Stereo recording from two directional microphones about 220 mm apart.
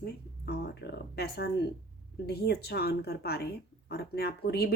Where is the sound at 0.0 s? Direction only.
45° left (ahead or behind).